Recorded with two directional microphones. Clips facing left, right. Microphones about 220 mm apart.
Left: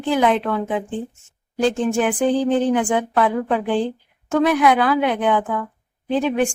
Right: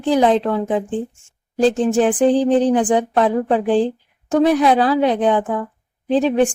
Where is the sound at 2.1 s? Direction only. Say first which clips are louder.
Right 4 dB; 30° right (ahead or behind).